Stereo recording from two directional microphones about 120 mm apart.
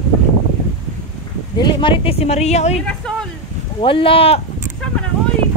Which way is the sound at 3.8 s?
50° left (ahead or behind).